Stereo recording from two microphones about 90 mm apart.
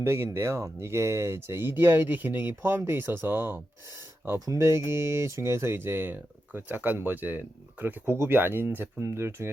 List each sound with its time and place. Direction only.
0.0 s speech: 30° right (ahead or behind)
4.4 s speech: 35° right (ahead or behind)